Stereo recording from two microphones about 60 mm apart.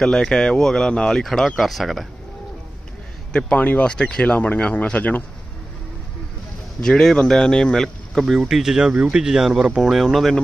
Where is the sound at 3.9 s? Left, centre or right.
Centre.